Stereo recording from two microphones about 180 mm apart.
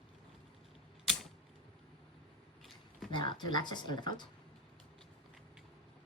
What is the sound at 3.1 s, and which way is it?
Speech, 25° left (ahead or behind).